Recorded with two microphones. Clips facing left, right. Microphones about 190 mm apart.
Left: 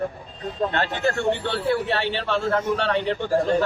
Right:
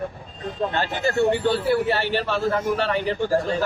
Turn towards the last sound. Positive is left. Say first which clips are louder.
# left 1 dB
turn(degrees=-5)  # may be behind; listen again after turning